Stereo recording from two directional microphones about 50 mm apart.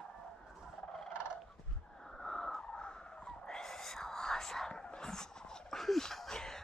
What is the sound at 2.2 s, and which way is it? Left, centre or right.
Whispering, centre.